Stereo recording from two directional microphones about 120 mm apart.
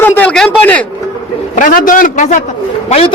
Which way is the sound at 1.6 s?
90° left.